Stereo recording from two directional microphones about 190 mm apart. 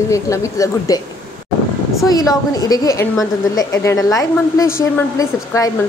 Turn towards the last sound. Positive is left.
turn(degrees=15)  # may be behind; listen again after turning